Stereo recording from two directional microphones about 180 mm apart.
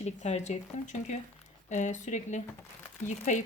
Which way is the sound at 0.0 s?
40° left (ahead or behind).